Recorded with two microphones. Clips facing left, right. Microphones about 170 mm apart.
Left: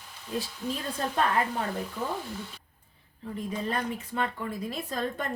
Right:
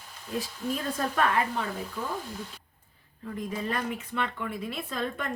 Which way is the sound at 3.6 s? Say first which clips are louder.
Even; 35° left (ahead or behind).